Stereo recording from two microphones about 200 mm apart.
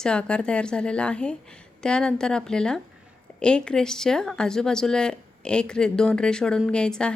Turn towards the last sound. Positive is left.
turn(degrees=5)  # may be behind; listen again after turning